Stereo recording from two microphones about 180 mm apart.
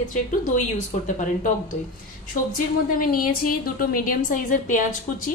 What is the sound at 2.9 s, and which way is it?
A woman's voice, 50° left (ahead or behind).